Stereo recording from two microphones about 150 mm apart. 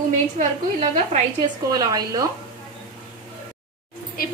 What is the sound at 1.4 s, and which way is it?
Speech, 25° right (ahead or behind).